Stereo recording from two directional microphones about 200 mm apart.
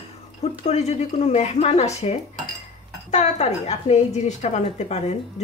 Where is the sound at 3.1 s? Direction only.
35° left (ahead or behind).